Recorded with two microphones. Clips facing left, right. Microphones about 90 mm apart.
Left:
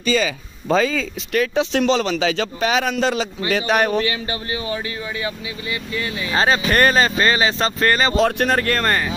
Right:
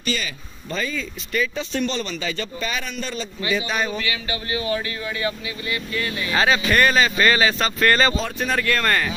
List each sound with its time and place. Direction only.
0.7 s speech: 90° left
3.4 s speech: 65° left (ahead or behind)
4.0 s speech: 35° left (ahead or behind); by 6.3 s 15° left (ahead or behind)
6.3 s speech: 35° left (ahead or behind)
7.2 s speech: 25° left (ahead or behind)
8.2 s speech: 70° left (ahead or behind)
8.5 s speech: 40° left (ahead or behind)